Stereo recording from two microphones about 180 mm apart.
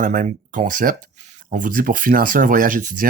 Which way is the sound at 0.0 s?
45° right (ahead or behind).